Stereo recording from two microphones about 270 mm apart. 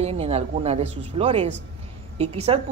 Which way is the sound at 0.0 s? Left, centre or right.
Right.